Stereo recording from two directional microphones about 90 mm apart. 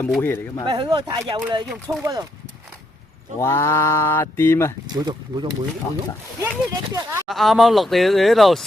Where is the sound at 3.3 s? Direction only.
30° left (ahead or behind).